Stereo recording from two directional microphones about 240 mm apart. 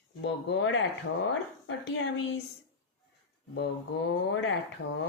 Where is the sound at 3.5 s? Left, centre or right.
Left.